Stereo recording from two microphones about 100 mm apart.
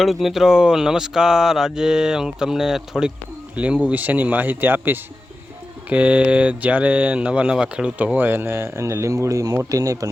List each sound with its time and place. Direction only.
0.0 s speech: centre (ahead or behind)
3.5 s speech: 15° right (ahead or behind); by 10.1 s 35° right (ahead or behind)